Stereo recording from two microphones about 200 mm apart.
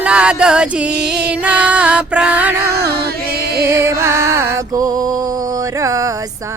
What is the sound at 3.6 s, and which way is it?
Music, 15° right (ahead or behind).